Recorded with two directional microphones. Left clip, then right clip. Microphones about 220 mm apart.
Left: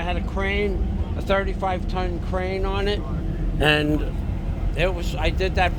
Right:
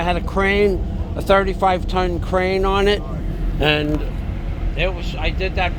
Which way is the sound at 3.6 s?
Centre (ahead or behind).